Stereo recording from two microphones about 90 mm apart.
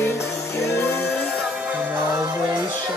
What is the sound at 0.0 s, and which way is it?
Music, 30° left (ahead or behind).